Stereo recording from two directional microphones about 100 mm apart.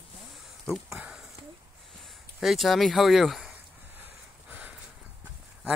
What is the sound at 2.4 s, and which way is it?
Speech, centre (ahead or behind).